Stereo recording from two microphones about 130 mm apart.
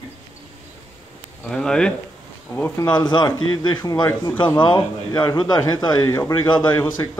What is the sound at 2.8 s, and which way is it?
Speech, 35° left (ahead or behind).